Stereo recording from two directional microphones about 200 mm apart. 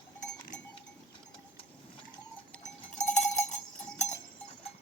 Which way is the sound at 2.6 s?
35° left (ahead or behind).